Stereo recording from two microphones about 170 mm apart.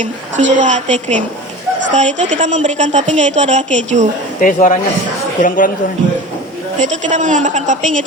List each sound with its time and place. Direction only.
0.0 s a woman's voice: 45° right (ahead or behind)
4.4 s speech: 50° left (ahead or behind)
6.7 s a woman's voice: 45° right (ahead or behind)